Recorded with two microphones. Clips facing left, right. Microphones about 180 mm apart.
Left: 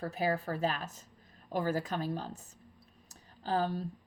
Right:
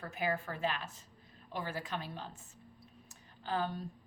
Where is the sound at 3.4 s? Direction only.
35° left (ahead or behind).